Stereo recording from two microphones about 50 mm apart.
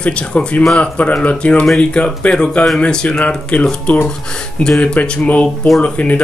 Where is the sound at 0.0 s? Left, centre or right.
Left.